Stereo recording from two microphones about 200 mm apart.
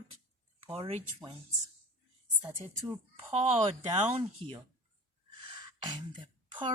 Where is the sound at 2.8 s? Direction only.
30° right (ahead or behind).